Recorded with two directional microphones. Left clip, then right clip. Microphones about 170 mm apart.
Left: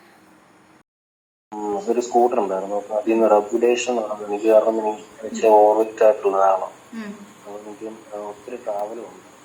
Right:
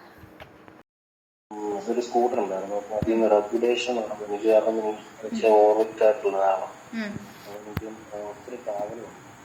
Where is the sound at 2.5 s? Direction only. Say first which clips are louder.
Left 5 dB; 20° left (ahead or behind).